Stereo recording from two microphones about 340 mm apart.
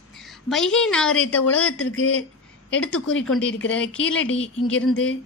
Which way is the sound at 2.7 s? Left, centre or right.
Centre.